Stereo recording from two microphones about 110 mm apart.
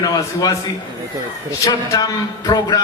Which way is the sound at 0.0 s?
30° left (ahead or behind).